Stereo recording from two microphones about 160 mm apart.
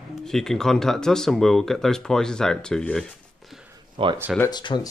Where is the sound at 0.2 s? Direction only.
5° left (ahead or behind).